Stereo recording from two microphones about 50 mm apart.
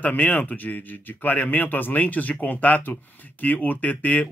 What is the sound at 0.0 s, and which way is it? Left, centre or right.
Speech, left.